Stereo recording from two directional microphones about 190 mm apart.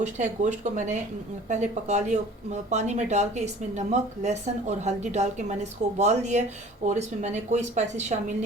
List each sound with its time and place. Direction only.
0.0 s speech: 40° right (ahead or behind)